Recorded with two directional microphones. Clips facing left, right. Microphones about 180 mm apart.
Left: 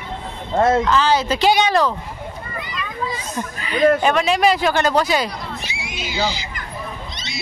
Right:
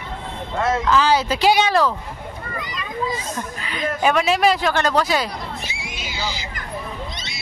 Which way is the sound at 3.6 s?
Centre (ahead or behind).